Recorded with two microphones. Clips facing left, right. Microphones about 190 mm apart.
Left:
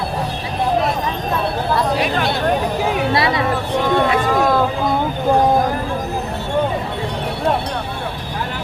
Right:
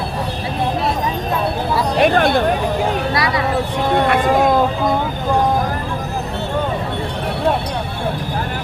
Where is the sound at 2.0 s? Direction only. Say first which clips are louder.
Right 6 dB; 50° right (ahead or behind).